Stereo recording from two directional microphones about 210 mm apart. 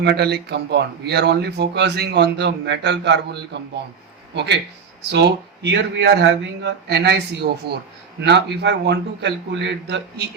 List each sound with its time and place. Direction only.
0.0 s a man's voice: 50° right (ahead or behind)